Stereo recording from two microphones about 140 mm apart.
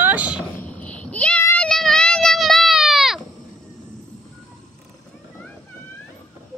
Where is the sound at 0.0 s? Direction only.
10° right (ahead or behind).